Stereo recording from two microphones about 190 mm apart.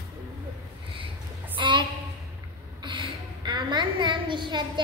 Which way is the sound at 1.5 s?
25° right (ahead or behind).